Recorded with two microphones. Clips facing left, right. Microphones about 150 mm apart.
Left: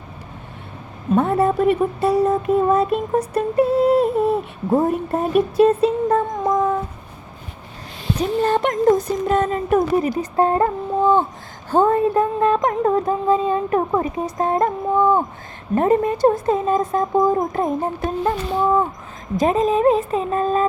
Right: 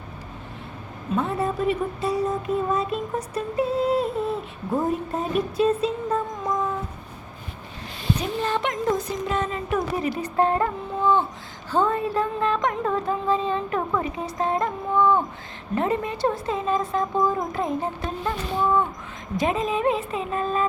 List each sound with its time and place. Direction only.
1.1 s speech: 60° left (ahead or behind)
8.4 s speech: 45° left (ahead or behind)
11.0 s a sound: 45° left (ahead or behind)
19.4 s speech: 40° left (ahead or behind)